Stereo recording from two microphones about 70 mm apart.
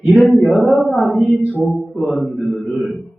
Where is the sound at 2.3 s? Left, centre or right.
Centre.